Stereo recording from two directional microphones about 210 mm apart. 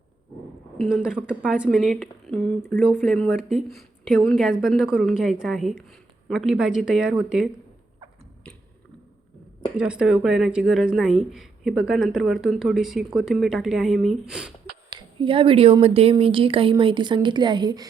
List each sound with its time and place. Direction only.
0.8 s speech: centre (ahead or behind)
9.7 s speech: 5° right (ahead or behind)
14.8 s speech: 25° right (ahead or behind)